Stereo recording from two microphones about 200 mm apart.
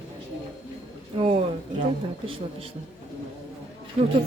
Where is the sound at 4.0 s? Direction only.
30° right (ahead or behind).